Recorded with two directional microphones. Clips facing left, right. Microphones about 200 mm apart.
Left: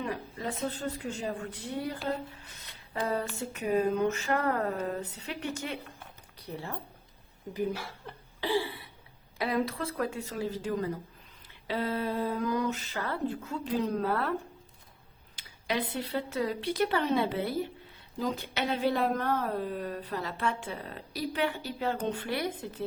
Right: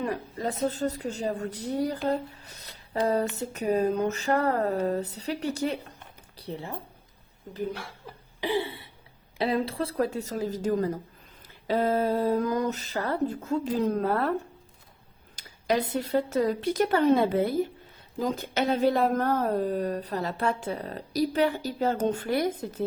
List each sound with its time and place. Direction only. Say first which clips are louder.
0.0 s speech: right 5 dB; 40° right (ahead or behind)
7.5 s speech: even; 5° left (ahead or behind)
8.4 s a sound: right 2 dB; 20° right (ahead or behind)
9.4 s speech: right 3 dB; 30° right (ahead or behind)
15.4 s speech: right 6 dB; 45° right (ahead or behind)